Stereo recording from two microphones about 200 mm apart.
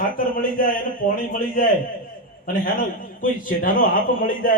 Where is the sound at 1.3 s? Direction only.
40° left (ahead or behind).